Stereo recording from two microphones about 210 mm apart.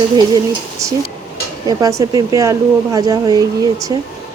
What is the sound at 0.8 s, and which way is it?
Speech, 15° right (ahead or behind).